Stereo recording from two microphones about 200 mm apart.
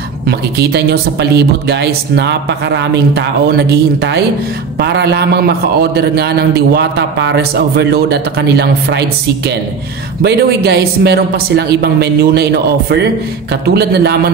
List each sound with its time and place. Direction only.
0.3 s a man's voice: 55° right (ahead or behind)
10.2 s a man's voice: 55° right (ahead or behind)